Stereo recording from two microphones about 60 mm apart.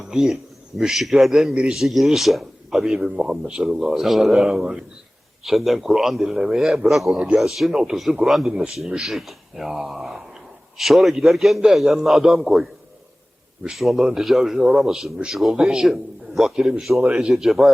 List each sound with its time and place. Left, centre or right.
0.1 s a man's voice: centre
17.0 s a man's voice: centre
17.2 s a man's voice: centre